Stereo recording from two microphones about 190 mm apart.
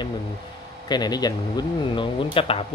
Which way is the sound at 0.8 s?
20° left (ahead or behind).